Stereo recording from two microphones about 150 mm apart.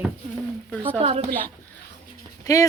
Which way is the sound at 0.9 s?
45° right (ahead or behind).